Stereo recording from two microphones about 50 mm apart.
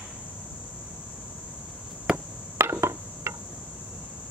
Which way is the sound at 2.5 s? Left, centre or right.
Right.